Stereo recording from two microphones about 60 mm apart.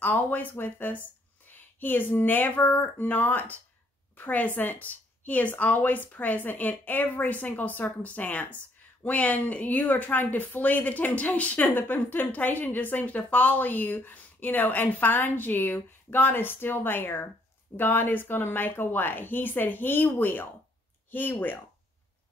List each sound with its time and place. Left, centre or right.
0.0 s speech: left